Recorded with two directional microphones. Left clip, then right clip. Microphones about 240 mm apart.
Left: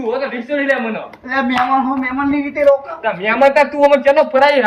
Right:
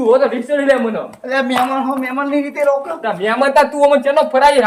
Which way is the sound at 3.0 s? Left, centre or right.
Right.